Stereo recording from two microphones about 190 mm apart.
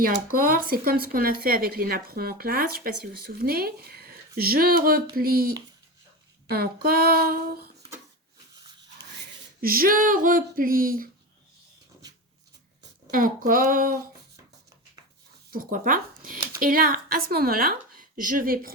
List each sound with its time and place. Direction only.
0.0 s speech: 50° right (ahead or behind)
6.8 s speech: 50° right (ahead or behind)
9.6 s speech: 50° right (ahead or behind)
13.1 s speech: 45° right (ahead or behind)
15.5 s speech: 45° right (ahead or behind)